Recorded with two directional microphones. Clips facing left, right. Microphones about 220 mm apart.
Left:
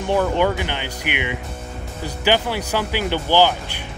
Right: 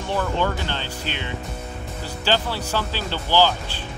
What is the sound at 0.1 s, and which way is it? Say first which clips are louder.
Speech: left 5 dB; 15° left (ahead or behind).